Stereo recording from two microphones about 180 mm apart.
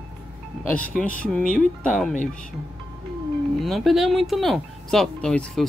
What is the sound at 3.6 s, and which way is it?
Speech, centre (ahead or behind).